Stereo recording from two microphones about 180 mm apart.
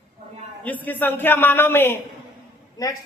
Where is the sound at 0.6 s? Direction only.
10° left (ahead or behind).